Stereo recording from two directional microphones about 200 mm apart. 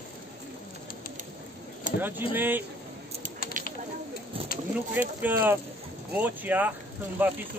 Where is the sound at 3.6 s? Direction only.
40° right (ahead or behind).